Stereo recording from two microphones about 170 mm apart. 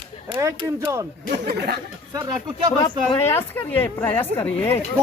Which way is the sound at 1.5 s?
70° right (ahead or behind).